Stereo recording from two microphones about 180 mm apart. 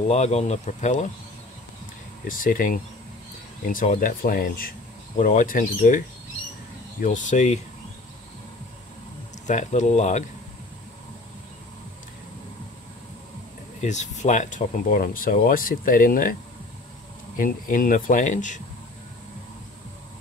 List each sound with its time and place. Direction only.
0.1 s speech: 35° left (ahead or behind)
2.2 s speech: 50° left (ahead or behind)
9.5 s speech: 40° left (ahead or behind)
13.7 s speech: 40° left (ahead or behind)
17.4 s speech: 50° left (ahead or behind)